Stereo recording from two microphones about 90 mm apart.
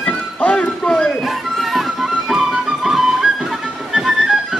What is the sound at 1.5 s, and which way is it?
Music, 5° right (ahead or behind).